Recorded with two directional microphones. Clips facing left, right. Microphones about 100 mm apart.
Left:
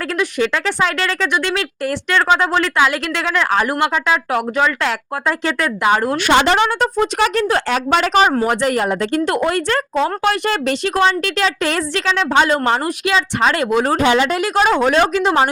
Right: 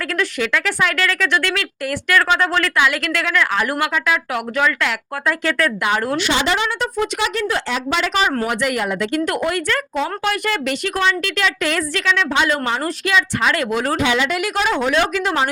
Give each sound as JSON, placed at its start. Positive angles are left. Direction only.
{"t": 0.1, "sound": "speech", "side_deg": 25}
{"t": 6.1, "sound": "a woman's voice", "side_deg": 50}
{"t": 8.4, "sound": "speech", "side_deg": 35}
{"t": 13.9, "sound": "speech", "side_deg": 40}
{"t": 15.1, "sound": "speech", "side_deg": 25}